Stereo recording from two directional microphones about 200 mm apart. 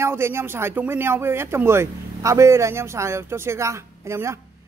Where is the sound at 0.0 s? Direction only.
10° right (ahead or behind).